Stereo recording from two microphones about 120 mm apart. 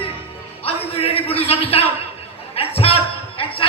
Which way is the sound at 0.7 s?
55° left (ahead or behind).